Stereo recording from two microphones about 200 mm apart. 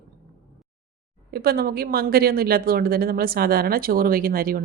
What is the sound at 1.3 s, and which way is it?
A woman's voice, 50° right (ahead or behind).